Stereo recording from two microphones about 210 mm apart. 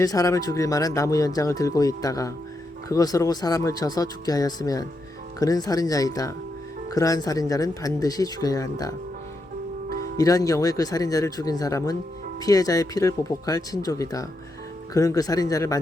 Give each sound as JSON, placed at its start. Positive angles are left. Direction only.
{"t": 0.0, "sound": "speech", "side_deg": 15}
{"t": 10.2, "sound": "speech", "side_deg": 15}